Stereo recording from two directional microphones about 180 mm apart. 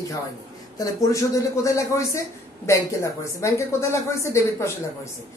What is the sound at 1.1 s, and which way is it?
Speech, 15° left (ahead or behind).